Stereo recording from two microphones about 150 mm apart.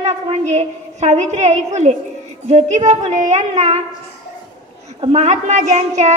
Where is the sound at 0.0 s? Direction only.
50° right (ahead or behind).